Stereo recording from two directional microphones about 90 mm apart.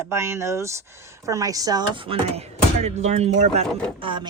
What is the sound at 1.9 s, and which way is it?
Speech, 90° right.